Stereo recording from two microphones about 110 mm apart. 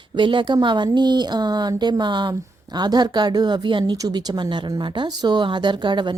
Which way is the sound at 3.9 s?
35° right (ahead or behind).